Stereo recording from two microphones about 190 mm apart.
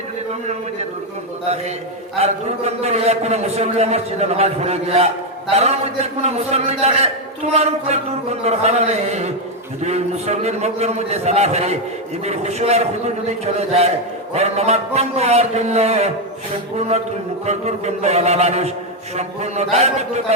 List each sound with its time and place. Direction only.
2.1 s a man's voice: 35° right (ahead or behind)
17.4 s a man's voice: 35° right (ahead or behind)